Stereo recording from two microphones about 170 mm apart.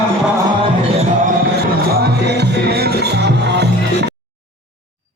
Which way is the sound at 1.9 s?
70° right (ahead or behind).